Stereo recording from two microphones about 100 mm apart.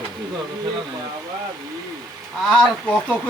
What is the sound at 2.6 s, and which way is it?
Speech, 10° left (ahead or behind).